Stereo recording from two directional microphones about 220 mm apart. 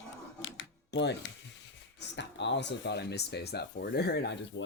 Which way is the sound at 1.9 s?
50° left (ahead or behind).